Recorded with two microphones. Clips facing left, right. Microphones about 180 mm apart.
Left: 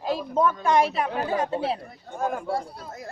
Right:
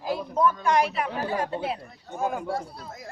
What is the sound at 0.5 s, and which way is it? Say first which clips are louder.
Speech: left 2 dB; 25° left (ahead or behind).